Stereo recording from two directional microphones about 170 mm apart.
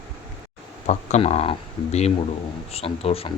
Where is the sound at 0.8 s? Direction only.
40° left (ahead or behind).